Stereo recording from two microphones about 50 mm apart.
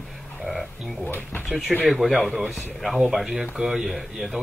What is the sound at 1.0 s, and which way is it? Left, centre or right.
Speech, left.